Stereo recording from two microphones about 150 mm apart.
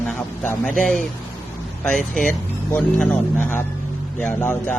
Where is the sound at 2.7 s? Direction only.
10° left (ahead or behind).